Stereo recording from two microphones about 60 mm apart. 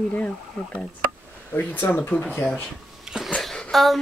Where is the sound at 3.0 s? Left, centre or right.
Centre.